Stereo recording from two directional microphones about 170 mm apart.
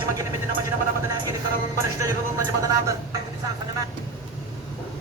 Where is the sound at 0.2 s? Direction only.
20° right (ahead or behind).